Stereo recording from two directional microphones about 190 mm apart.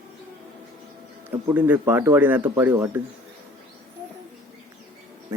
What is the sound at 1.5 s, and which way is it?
Speech, 10° right (ahead or behind).